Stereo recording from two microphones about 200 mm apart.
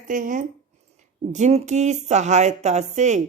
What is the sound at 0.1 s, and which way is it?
Speech, 40° right (ahead or behind).